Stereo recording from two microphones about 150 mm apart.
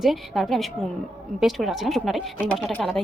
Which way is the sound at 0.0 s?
Centre (ahead or behind).